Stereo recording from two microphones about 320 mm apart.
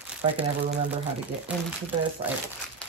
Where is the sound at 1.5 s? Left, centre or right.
Centre.